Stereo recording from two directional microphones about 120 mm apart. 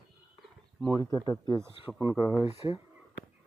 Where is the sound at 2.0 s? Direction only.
15° right (ahead or behind).